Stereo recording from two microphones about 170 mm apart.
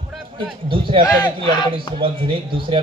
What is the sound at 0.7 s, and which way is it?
Speech, 30° right (ahead or behind).